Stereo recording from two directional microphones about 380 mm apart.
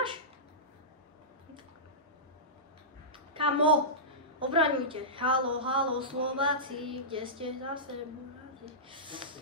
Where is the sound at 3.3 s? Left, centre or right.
Centre.